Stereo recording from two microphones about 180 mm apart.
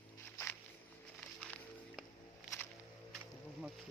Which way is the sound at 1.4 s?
5° left (ahead or behind).